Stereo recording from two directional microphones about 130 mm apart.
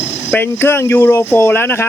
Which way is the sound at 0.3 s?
15° left (ahead or behind).